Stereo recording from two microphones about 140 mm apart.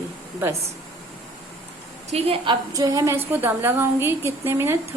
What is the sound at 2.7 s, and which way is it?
A woman's voice, 25° right (ahead or behind).